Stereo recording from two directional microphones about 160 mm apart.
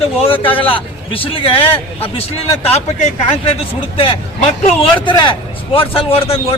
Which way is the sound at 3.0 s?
50° left (ahead or behind).